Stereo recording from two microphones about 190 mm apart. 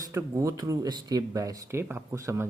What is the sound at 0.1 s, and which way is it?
Speech, 15° right (ahead or behind).